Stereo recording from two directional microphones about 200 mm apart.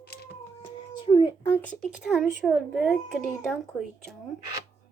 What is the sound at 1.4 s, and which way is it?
A woman's voice, 10° left (ahead or behind).